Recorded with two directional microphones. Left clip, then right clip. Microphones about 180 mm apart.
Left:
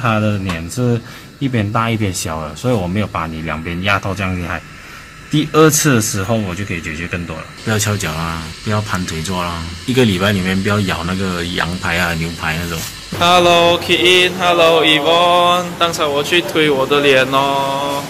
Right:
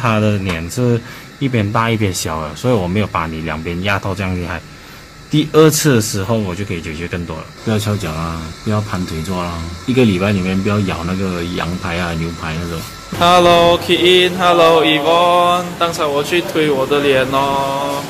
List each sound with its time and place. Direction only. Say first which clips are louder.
0.0 s mantra: right 1 dB; 15° right (ahead or behind)
7.6 s a man's voice: left 2 dB; 5° right (ahead or behind)
8.6 s mantra: left 1 dB; 10° right (ahead or behind)
9.9 s a man's voice: even; 5° right (ahead or behind)
13.2 s mantra: right 1 dB; 20° right (ahead or behind)
16.5 s a man's voice: even; centre (ahead or behind)